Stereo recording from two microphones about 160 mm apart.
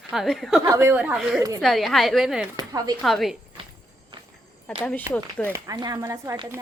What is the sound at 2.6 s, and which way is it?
Speech, 25° right (ahead or behind).